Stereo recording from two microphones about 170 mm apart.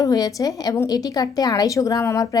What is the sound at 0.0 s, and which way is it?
A woman's voice, 20° left (ahead or behind).